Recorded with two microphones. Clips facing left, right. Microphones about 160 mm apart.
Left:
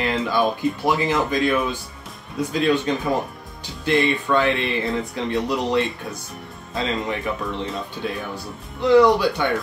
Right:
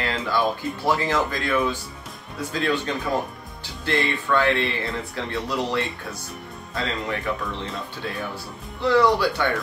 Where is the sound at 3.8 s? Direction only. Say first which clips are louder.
Left 5 dB; 20° left (ahead or behind).